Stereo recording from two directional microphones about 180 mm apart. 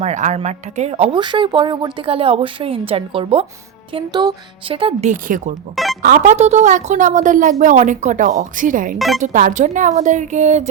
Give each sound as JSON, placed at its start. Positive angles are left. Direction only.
{"t": 0.0, "sound": "speech", "side_deg": -40}
{"t": 5.7, "sound": "speech", "side_deg": 0}
{"t": 6.0, "sound": "speech", "side_deg": -45}